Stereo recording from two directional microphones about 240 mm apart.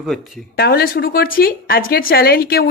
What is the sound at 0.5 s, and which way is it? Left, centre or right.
A woman's voice, left.